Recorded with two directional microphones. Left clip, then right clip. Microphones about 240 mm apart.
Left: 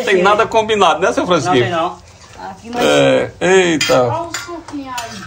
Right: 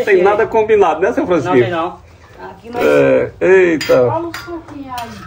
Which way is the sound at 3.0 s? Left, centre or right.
Left.